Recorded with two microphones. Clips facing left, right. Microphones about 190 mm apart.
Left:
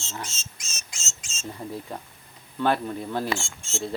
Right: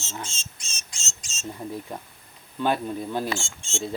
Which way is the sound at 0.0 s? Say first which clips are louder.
Even; 25° right (ahead or behind).